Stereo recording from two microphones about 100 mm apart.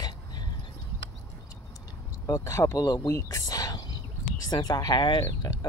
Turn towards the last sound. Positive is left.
turn(degrees=50)  # may be behind; listen again after turning